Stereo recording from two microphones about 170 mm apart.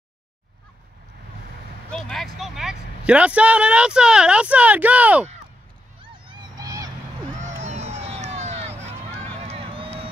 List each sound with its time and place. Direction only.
1.9 s speech: 5° left (ahead or behind)
6.0 s vehicle: 30° right (ahead or behind)
7.3 s a sound: 45° right (ahead or behind)
9.4 s run: 35° right (ahead or behind)